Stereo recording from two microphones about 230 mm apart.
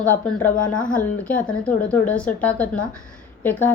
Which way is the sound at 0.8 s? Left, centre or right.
Left.